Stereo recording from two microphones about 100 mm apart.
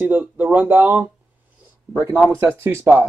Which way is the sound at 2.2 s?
20° right (ahead or behind).